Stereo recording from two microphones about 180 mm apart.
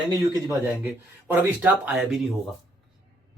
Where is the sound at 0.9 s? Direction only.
10° right (ahead or behind).